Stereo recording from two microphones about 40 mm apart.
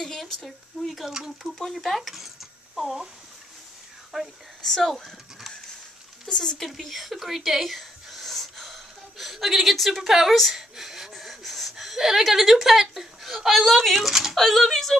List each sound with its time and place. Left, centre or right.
0.0 s speech: centre
0.8 s speech: centre
1.1 s speech: centre
1.5 s speech: centre
4.1 s speech: centre
4.6 s speech: centre
6.6 s speech: centre
10.5 s gasp: centre
11.7 s a sound: centre
12.2 s speech: centre
14.3 s speech: centre